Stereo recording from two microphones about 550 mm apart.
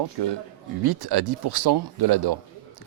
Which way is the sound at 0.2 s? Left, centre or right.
Right.